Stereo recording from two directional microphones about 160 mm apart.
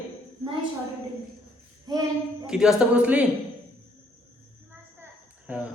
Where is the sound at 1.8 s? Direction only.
25° right (ahead or behind).